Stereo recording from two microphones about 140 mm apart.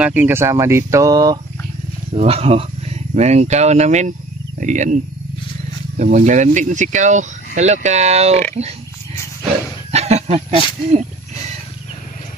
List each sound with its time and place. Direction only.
0.0 s speech: 15° right (ahead or behind)
2.1 s speech: 45° right (ahead or behind)
9.8 s speech: 50° right (ahead or behind)